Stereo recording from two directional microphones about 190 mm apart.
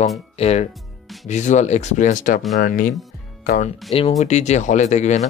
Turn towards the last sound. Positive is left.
turn(degrees=35)  # may be behind; listen again after turning